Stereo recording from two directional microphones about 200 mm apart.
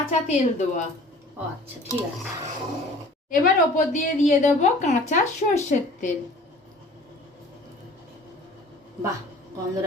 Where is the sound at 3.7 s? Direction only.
40° left (ahead or behind).